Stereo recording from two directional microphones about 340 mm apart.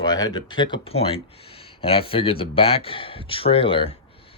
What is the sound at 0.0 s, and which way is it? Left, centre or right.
Speech, centre.